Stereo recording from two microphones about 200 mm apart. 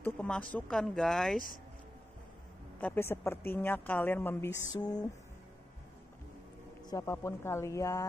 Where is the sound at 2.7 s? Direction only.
10° left (ahead or behind).